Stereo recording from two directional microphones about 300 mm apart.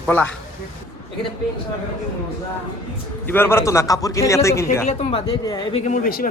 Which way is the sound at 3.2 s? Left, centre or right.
Centre.